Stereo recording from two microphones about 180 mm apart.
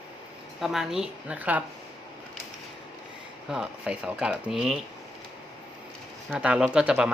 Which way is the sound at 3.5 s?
5° right (ahead or behind).